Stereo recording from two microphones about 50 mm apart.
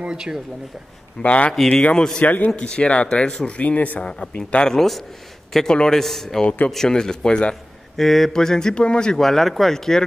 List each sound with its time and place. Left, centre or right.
0.0 s speech: centre
1.2 s speech: left
2.1 s speech: left
2.5 s speech: left
3.5 s speech: left
4.6 s a man's voice: centre
8.0 s speech: centre